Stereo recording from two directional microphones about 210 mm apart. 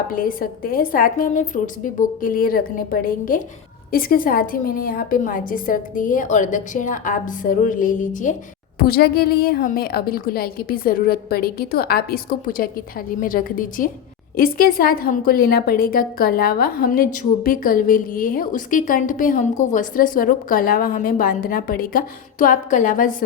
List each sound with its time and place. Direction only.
0.1 s a woman's voice: 40° left (ahead or behind)